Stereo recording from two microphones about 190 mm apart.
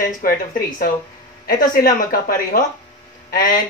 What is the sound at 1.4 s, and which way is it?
Speech, 50° left (ahead or behind).